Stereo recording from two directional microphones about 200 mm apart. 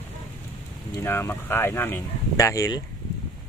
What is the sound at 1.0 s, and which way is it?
Speech, 10° left (ahead or behind).